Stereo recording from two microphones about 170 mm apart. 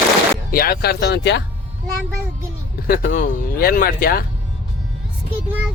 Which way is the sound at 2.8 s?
60° left (ahead or behind).